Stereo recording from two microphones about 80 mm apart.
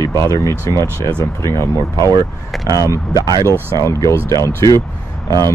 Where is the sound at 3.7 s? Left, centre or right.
Left.